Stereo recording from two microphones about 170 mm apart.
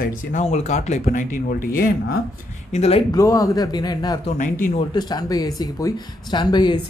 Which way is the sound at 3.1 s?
20° left (ahead or behind).